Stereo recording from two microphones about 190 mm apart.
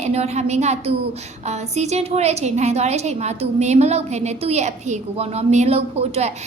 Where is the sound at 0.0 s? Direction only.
35° right (ahead or behind).